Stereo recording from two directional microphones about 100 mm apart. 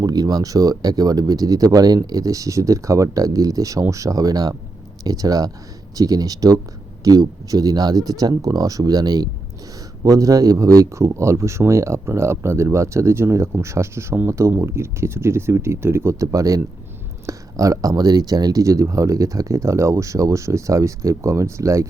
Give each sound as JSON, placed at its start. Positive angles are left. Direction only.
{"t": 0.0, "sound": "speech", "side_deg": -40}